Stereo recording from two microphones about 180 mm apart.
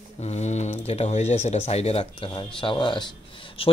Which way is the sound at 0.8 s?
35° left (ahead or behind).